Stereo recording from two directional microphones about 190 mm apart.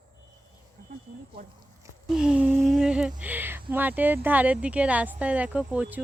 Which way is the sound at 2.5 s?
Centre (ahead or behind).